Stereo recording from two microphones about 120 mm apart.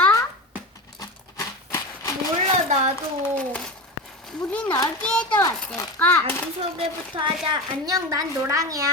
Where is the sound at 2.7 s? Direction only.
75° right (ahead or behind).